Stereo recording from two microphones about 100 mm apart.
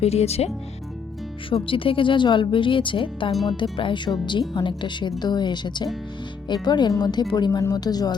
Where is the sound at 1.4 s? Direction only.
60° left (ahead or behind).